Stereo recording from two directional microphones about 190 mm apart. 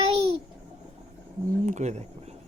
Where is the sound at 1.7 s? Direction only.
40° right (ahead or behind).